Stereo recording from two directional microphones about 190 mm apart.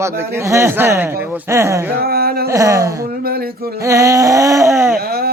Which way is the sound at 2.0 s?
55° right (ahead or behind).